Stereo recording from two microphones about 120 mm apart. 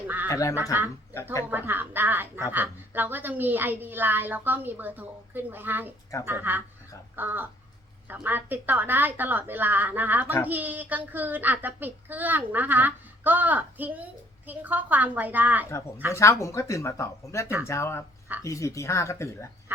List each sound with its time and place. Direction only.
0.3 s speech: 25° left (ahead or behind)
1.5 s speech: 15° right (ahead or behind)
16.1 s speech: 25° left (ahead or behind)